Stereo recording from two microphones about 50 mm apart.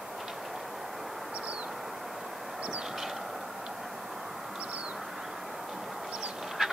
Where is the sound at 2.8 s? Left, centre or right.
Centre.